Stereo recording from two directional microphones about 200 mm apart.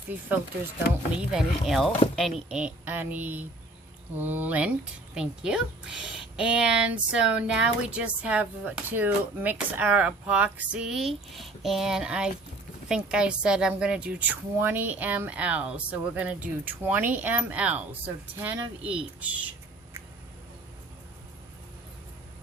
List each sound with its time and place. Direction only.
1.2 s a woman's voice: 5° right (ahead or behind)